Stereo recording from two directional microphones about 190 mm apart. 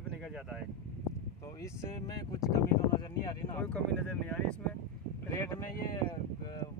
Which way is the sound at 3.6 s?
5° left (ahead or behind).